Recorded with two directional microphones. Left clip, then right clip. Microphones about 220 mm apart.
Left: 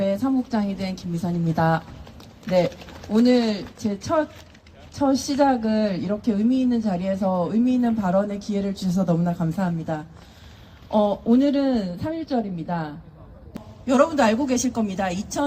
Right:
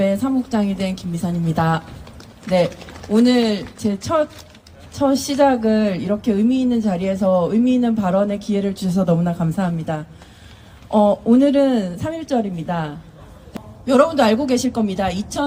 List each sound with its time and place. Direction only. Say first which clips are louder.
0.0 s speech: right 4 dB; 40° right (ahead or behind)
3.1 s speech: right 3 dB; 40° right (ahead or behind)